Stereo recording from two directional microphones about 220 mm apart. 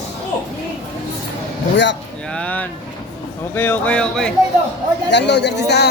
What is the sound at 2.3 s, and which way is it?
Speech, 5° left (ahead or behind).